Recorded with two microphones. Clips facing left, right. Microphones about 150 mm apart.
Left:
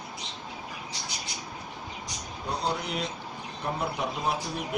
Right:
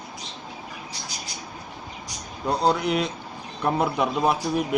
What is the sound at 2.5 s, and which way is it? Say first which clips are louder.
A man's voice: right 9 dB; 70° right (ahead or behind).